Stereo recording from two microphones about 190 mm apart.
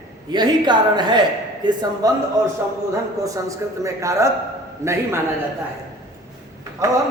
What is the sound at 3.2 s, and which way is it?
A man's voice, 15° right (ahead or behind).